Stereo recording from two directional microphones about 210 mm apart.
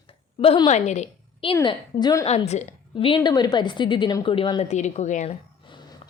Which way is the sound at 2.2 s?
30° left (ahead or behind).